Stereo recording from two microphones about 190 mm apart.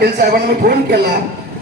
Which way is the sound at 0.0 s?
55° right (ahead or behind).